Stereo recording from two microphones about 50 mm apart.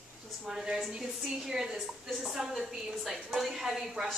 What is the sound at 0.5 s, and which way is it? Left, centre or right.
A woman's voice, centre.